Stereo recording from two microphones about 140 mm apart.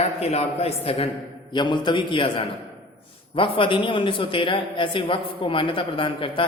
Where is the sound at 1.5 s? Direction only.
35° left (ahead or behind).